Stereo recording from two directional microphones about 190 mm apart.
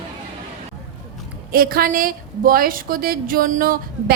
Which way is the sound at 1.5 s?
50° right (ahead or behind).